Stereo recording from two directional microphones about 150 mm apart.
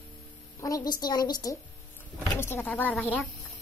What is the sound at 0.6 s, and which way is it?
A woman's voice, 25° left (ahead or behind).